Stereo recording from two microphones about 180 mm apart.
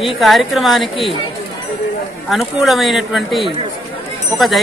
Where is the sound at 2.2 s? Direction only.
Centre (ahead or behind).